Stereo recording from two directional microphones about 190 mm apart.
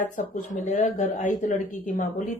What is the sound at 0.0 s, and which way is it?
Speech, 45° left (ahead or behind).